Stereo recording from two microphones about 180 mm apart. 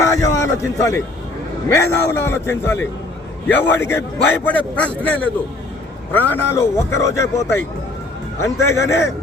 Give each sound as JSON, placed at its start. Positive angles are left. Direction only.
{"t": 0.0, "sound": "a sound", "side_deg": 15}
{"t": 1.7, "sound": "a man's voice", "side_deg": 15}
{"t": 8.6, "sound": "a man's voice", "side_deg": 15}